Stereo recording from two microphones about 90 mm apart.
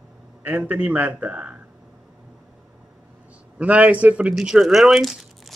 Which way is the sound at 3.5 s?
15° right (ahead or behind).